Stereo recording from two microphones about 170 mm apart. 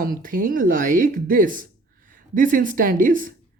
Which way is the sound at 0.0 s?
55° right (ahead or behind).